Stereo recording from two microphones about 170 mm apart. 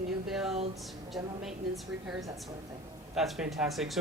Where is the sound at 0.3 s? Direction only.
Centre (ahead or behind).